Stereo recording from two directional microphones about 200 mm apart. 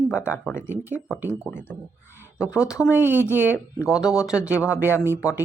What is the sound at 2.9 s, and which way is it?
Speech, 10° right (ahead or behind).